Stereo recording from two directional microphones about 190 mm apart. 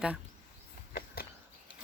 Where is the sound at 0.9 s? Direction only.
50° left (ahead or behind).